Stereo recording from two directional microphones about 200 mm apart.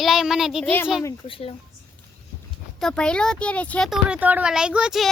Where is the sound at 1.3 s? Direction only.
30° left (ahead or behind).